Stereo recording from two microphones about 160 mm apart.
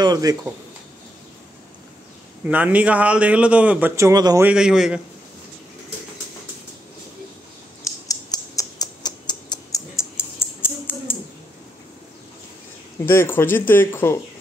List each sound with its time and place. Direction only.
0.0 s speech: 25° right (ahead or behind)
2.4 s a man's voice: 10° right (ahead or behind)
3.9 s speech: 20° right (ahead or behind)
4.5 s a man's voice: 5° right (ahead or behind)
8.1 s a sound: 25° left (ahead or behind)
13.0 s speech: 15° left (ahead or behind)